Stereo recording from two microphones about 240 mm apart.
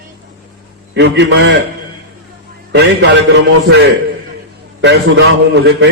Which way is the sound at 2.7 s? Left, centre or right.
Right.